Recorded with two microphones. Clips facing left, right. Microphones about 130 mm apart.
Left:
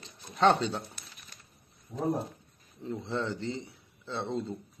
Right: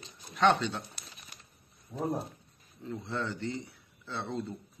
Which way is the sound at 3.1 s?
25° left (ahead or behind).